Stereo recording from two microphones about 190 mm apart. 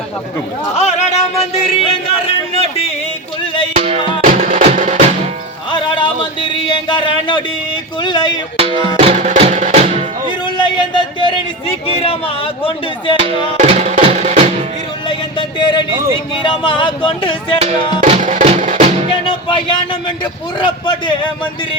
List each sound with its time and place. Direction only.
0.8 s speech: 35° left (ahead or behind)
3.8 s music: 35° right (ahead or behind)
6.7 s speech: 25° left (ahead or behind)
8.5 s music: 30° right (ahead or behind)
10.4 s a sound: 25° left (ahead or behind)
13.1 s music: 30° right (ahead or behind)
15.0 s music: 25° left (ahead or behind)
17.6 s music: 35° right (ahead or behind)
19.2 s a man's voice: 25° left (ahead or behind)